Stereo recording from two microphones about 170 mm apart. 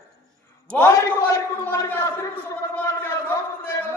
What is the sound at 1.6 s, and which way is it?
A man's voice, 10° left (ahead or behind).